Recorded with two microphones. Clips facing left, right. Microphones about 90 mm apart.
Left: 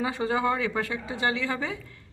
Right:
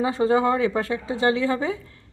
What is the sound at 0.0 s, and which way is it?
Speech, 30° right (ahead or behind).